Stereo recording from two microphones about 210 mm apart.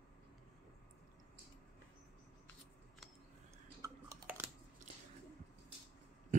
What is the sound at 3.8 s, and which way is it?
Chewing, 10° right (ahead or behind).